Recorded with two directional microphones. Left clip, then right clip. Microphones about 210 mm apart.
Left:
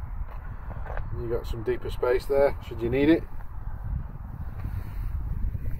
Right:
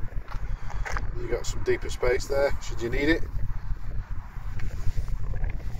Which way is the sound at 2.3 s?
10° left (ahead or behind).